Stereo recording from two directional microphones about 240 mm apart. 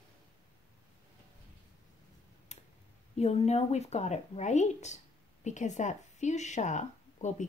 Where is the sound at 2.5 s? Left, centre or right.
Left.